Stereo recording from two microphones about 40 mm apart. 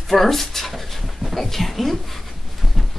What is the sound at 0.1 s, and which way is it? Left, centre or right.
Speech, centre.